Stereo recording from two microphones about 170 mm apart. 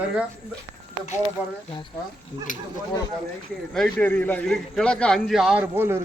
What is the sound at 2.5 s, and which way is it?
Speech, 50° left (ahead or behind).